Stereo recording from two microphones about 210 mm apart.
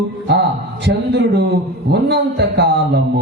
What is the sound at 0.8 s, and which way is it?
Speech, 55° right (ahead or behind).